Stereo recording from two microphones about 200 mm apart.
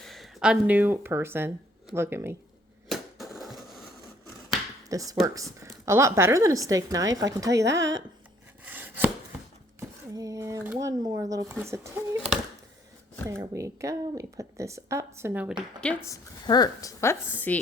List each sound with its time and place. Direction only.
0.0 s speech: centre (ahead or behind)
2.9 s a sound: centre (ahead or behind)
4.9 s speech: 15° right (ahead or behind)
7.6 s speech: 60° right (ahead or behind)
8.6 s chopping: 10° right (ahead or behind)
10.2 s speech: 15° right (ahead or behind)
13.2 s speech: 15° right (ahead or behind)
15.8 s a woman's voice: 10° left (ahead or behind)